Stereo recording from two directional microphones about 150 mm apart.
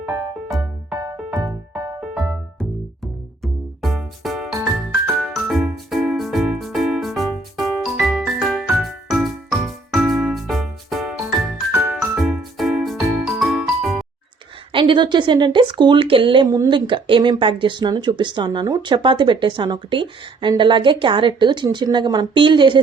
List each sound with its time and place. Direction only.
0.0 s music: 15° right (ahead or behind)
3.4 s music: centre (ahead or behind)
14.7 s speech: 35° right (ahead or behind)